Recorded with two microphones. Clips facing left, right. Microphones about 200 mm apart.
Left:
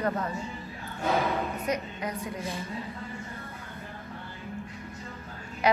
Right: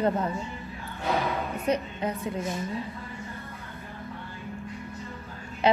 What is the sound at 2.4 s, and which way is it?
Speech, 30° left (ahead or behind).